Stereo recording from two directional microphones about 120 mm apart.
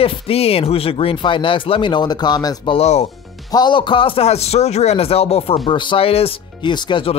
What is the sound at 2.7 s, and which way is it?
Speech, 60° left (ahead or behind).